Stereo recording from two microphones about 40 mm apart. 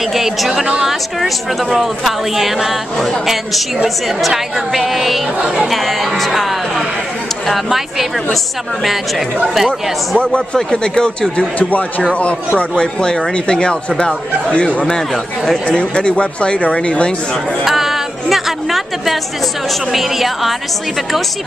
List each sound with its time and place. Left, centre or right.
0.1 s a woman's voice: centre
7.4 s a woman's voice: centre
9.7 s a man's voice: left
12.5 s a man's voice: left
15.4 s speech: centre
15.8 s speech: left
17.6 s a woman's voice: centre